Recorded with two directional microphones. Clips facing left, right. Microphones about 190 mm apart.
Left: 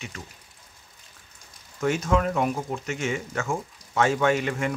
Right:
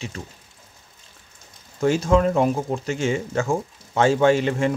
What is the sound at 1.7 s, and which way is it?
Speech, 30° right (ahead or behind).